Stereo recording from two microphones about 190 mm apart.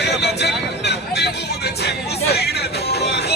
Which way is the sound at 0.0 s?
60° left (ahead or behind).